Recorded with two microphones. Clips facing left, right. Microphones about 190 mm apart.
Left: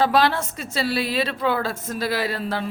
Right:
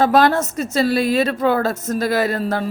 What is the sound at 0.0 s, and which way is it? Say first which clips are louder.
A woman's voice: right 5 dB; 45° right (ahead or behind).